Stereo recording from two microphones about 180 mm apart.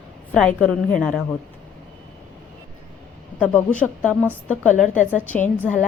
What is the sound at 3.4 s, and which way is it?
A woman's voice, 10° left (ahead or behind).